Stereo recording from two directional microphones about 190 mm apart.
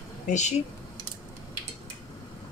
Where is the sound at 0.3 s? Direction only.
40° left (ahead or behind).